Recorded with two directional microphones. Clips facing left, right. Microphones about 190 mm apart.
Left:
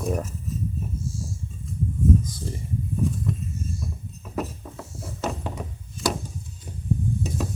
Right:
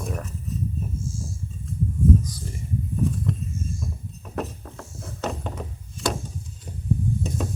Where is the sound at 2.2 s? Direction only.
25° left (ahead or behind).